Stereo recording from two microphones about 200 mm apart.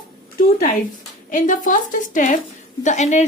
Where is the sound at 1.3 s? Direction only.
40° left (ahead or behind).